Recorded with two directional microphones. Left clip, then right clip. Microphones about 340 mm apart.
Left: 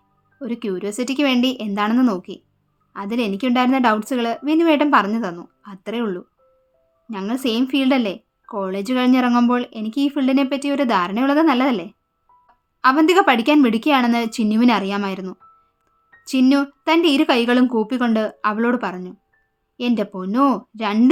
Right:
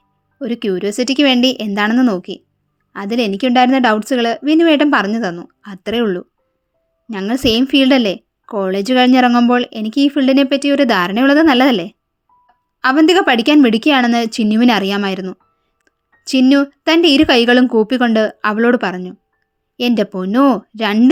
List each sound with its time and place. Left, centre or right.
0.3 s a woman's voice: centre